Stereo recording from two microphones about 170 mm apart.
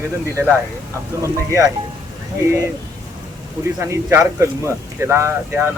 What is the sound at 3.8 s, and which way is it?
Speech, 15° right (ahead or behind).